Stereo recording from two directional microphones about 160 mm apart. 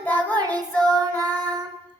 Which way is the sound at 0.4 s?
25° right (ahead or behind).